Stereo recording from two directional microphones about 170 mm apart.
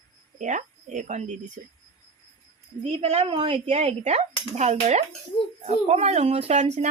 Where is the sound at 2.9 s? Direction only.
35° right (ahead or behind).